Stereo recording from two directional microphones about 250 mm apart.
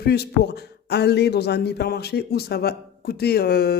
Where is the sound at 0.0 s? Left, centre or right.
Left.